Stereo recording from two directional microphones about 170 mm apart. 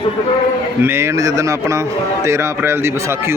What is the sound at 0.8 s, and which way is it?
A man's voice, 15° right (ahead or behind).